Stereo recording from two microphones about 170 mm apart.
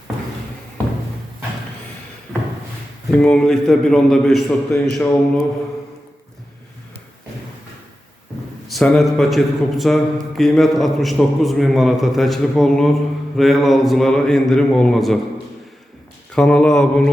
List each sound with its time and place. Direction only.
3.1 s speech: 5° left (ahead or behind)
8.6 s speech: 5° left (ahead or behind)
16.3 s speech: 5° left (ahead or behind)